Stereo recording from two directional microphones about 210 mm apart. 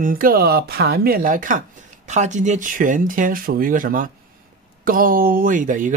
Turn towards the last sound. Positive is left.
turn(degrees=-40)  # may be behind; listen again after turning